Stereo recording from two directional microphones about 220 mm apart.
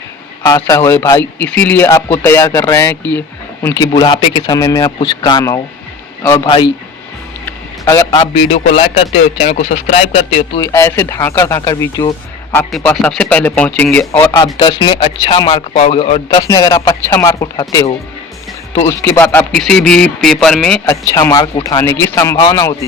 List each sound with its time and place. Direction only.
0.4 s speech: 15° left (ahead or behind)
7.4 s a sound: 15° left (ahead or behind)
8.4 s speech: 25° left (ahead or behind)
10.6 s speech: 10° left (ahead or behind)
14.2 s speech: 20° left (ahead or behind)
16.4 s speech: 15° left (ahead or behind)
20.8 s speech: 15° left (ahead or behind)